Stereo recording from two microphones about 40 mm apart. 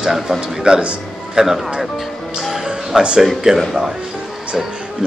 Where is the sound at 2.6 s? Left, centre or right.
Right.